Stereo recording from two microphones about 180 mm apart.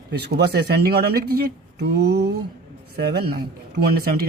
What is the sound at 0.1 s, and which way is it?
Speech, 65° right (ahead or behind).